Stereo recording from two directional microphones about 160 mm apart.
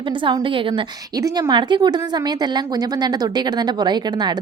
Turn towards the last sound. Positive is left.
turn(degrees=-25)  # may be behind; listen again after turning